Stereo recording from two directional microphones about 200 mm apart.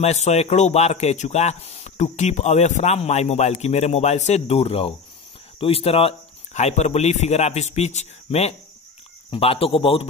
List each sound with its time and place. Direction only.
0.0 s speech: 35° left (ahead or behind)